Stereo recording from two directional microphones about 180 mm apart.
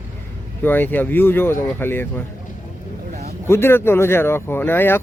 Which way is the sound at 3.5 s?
15° left (ahead or behind).